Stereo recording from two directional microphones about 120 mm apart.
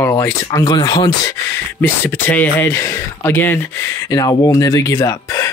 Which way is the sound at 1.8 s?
20° left (ahead or behind).